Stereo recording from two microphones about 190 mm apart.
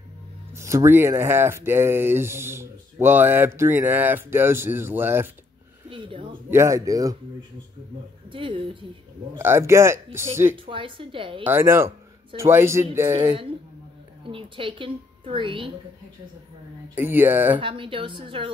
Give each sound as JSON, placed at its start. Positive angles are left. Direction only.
{"t": 0.6, "sound": "speech", "side_deg": -15}
{"t": 5.9, "sound": "speech", "side_deg": -25}
{"t": 6.5, "sound": "speech", "side_deg": -15}
{"t": 8.3, "sound": "a woman's voice", "side_deg": -25}
{"t": 9.4, "sound": "speech", "side_deg": -15}
{"t": 10.6, "sound": "a woman's voice", "side_deg": -25}
{"t": 11.4, "sound": "speech", "side_deg": -10}
{"t": 14.2, "sound": "a woman's voice", "side_deg": -25}
{"t": 16.9, "sound": "speech", "side_deg": -10}
{"t": 17.6, "sound": "a woman's voice", "side_deg": -25}